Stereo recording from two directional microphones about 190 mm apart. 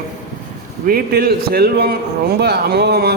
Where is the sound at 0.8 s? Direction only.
50° right (ahead or behind).